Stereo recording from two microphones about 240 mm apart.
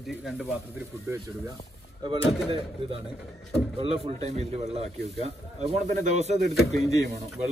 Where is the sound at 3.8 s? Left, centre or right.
Right.